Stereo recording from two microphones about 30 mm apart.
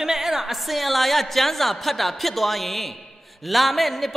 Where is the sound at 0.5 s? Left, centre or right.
Centre.